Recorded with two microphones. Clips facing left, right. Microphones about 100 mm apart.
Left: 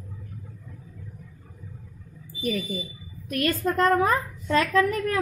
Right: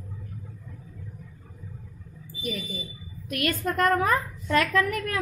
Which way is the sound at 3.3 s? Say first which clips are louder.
Left 3 dB; 35° left (ahead or behind).